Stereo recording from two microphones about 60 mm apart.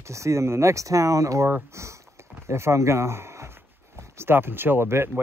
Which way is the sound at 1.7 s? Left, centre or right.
Right.